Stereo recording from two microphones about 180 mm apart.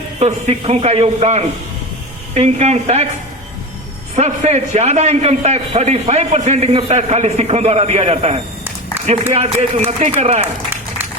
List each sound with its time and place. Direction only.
0.2 s a man's voice: 40° right (ahead or behind)
4.1 s a man's voice: 40° right (ahead or behind)